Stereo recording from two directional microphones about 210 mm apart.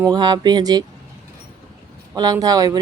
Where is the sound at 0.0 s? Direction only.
20° right (ahead or behind).